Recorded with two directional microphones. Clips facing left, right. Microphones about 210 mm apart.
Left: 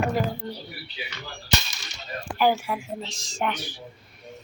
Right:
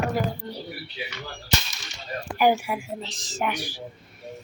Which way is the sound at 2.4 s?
15° right (ahead or behind).